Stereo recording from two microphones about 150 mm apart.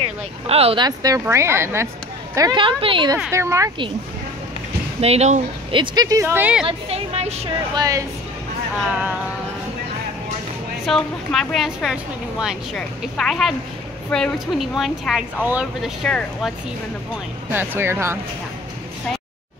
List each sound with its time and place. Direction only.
0.5 s speech: 40° right (ahead or behind)
0.8 s speech: 25° right (ahead or behind)
2.6 s speech: 35° right (ahead or behind)
3.3 s speech: 20° right (ahead or behind)
5.0 s speech: 45° right (ahead or behind)
5.8 s speech: 25° right (ahead or behind)
6.6 s music: 45° right (ahead or behind)
7.7 s speech: 25° right (ahead or behind)
10.9 s a woman's voice: centre (ahead or behind)
17.5 s speech: 15° right (ahead or behind)